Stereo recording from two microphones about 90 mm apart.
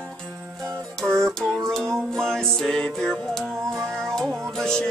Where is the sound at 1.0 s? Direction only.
5° left (ahead or behind).